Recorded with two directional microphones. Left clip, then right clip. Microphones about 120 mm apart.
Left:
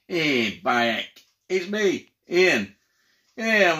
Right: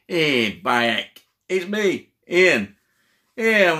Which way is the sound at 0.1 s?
15° right (ahead or behind).